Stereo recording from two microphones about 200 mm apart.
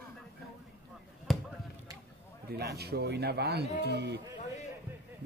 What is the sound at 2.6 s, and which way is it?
A man's voice, 55° right (ahead or behind).